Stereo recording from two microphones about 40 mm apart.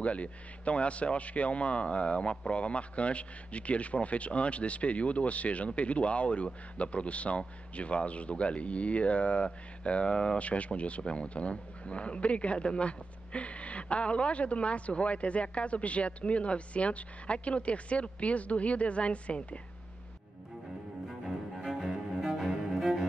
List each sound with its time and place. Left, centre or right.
0.0 s speech: left
21.6 s cello: centre